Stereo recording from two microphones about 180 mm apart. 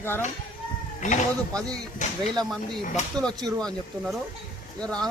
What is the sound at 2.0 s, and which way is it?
Speech, 40° left (ahead or behind).